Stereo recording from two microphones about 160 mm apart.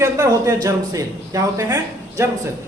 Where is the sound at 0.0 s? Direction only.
20° right (ahead or behind).